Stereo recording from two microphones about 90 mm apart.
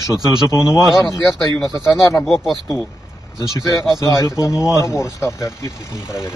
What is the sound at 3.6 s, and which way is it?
Speech, 40° left (ahead or behind).